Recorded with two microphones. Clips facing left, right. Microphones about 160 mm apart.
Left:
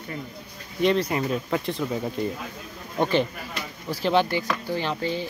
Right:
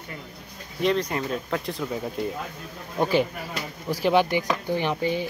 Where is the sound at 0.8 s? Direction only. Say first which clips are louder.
Left 2 dB; centre (ahead or behind).